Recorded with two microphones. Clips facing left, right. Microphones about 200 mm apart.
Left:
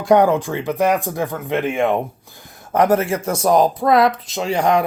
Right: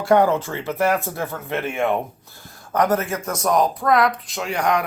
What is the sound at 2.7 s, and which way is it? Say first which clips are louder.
Speech: left 4 dB; 25° left (ahead or behind).